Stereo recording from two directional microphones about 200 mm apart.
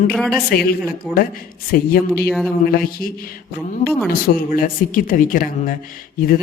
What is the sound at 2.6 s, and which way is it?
Speech, 50° left (ahead or behind).